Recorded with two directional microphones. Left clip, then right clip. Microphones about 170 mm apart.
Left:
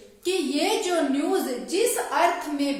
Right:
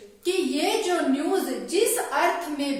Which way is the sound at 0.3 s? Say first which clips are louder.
Even; 30° left (ahead or behind).